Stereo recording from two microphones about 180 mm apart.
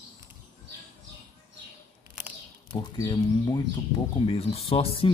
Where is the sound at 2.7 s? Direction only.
25° left (ahead or behind).